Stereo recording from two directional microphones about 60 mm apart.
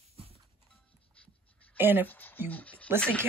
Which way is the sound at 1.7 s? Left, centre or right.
Right.